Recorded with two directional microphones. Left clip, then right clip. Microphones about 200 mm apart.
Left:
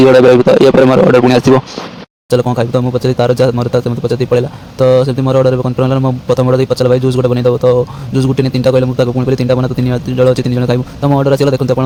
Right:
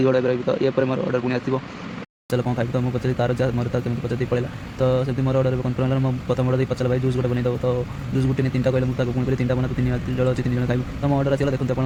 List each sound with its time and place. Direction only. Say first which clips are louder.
0.0 s a man's voice: left 15 dB; 45° left (ahead or behind)
2.3 s speech: left 12 dB; 30° left (ahead or behind)